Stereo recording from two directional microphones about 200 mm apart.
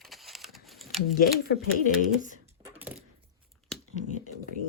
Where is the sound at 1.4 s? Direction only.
50° left (ahead or behind).